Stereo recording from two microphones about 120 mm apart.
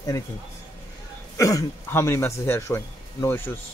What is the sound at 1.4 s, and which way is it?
Speech, 25° left (ahead or behind).